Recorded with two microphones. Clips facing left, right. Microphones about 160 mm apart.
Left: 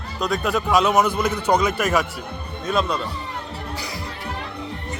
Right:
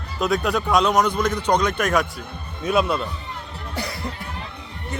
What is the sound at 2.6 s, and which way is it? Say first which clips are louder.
Speech: right 2 dB; 10° right (ahead or behind).